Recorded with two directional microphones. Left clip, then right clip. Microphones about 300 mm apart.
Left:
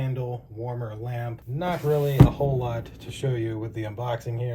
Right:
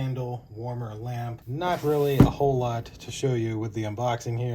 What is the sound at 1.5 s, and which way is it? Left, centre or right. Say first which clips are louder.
Speech: right 1 dB; right.